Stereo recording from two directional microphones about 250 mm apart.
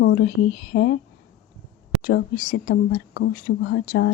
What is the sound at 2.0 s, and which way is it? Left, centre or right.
Speech, left.